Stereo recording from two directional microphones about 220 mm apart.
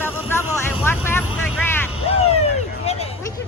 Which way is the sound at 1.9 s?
25° left (ahead or behind).